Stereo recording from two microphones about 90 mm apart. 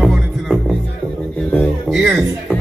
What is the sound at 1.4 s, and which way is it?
Music, 15° left (ahead or behind).